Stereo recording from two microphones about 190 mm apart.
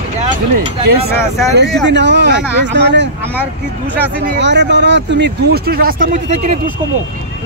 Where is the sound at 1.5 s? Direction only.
65° right (ahead or behind).